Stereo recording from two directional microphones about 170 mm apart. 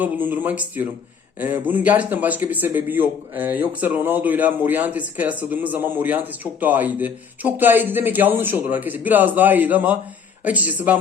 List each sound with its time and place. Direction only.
0.0 s speech: 10° right (ahead or behind)